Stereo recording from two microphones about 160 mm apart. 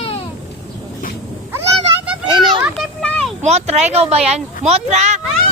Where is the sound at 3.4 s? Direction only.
45° right (ahead or behind).